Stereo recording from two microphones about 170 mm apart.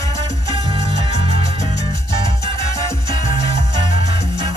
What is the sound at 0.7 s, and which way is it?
Music, 25° right (ahead or behind).